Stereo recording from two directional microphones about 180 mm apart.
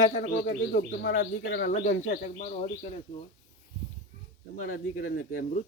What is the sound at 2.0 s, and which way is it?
Speech, 40° left (ahead or behind).